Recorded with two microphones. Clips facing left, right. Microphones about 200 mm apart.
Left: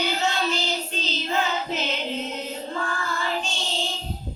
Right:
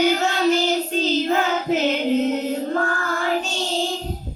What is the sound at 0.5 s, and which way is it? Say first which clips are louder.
Music: right 9 dB; 50° right (ahead or behind).